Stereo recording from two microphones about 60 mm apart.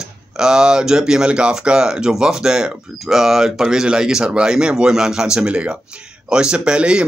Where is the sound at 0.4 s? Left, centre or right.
Centre.